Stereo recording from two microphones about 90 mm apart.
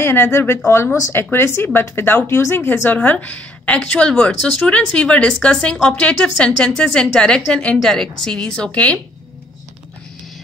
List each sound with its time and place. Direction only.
0.0 s a woman's voice: 25° left (ahead or behind)